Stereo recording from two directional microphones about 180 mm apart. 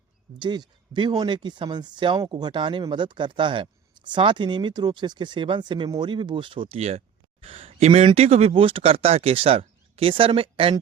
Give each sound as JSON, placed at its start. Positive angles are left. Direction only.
{"t": 0.3, "sound": "speech", "side_deg": -25}